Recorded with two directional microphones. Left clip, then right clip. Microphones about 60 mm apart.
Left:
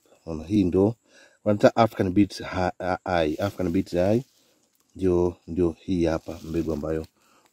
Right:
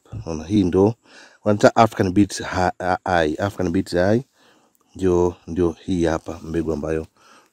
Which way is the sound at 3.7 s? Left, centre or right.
Centre.